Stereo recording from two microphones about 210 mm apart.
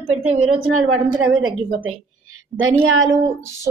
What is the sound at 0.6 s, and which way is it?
A woman's voice, 80° right.